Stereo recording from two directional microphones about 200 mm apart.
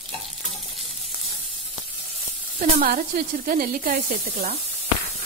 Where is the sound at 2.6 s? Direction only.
45° right (ahead or behind).